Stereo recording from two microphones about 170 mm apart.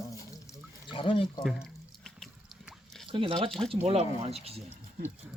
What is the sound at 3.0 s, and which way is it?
Speech, 30° right (ahead or behind).